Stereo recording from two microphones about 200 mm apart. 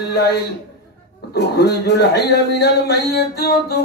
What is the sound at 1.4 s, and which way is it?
A man's voice, 55° left (ahead or behind).